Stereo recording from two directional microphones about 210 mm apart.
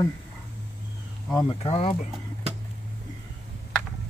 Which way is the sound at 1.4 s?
30° left (ahead or behind).